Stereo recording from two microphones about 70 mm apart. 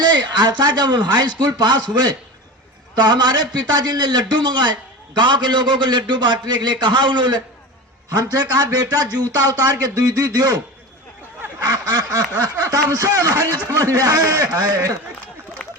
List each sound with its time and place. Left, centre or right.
0.0 s a man's voice: right
8.1 s speech: right
11.7 s speech: right